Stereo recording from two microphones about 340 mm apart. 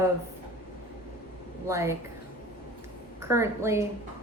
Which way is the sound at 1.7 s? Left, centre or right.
Centre.